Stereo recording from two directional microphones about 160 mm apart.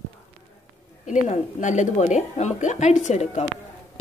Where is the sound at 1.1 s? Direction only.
45° left (ahead or behind).